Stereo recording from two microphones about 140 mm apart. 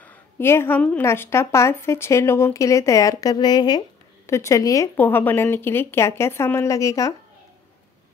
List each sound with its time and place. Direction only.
0.0 s a woman's voice: 15° left (ahead or behind)
4.9 s speech: 15° left (ahead or behind)